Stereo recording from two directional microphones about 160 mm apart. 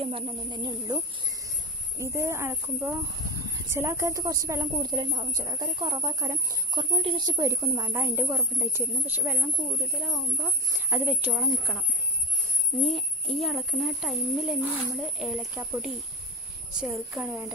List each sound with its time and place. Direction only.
0.0 s speech: 35° right (ahead or behind)
2.0 s a woman's voice: 15° right (ahead or behind); by 11.8 s centre (ahead or behind)
12.8 s a woman's voice: centre (ahead or behind)